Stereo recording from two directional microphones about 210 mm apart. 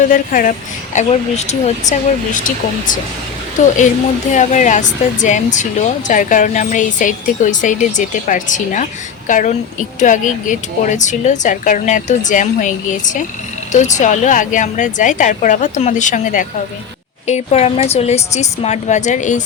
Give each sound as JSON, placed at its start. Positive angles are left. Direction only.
{"t": 0.1, "sound": "speech", "side_deg": 40}
{"t": 4.3, "sound": "speech", "side_deg": 35}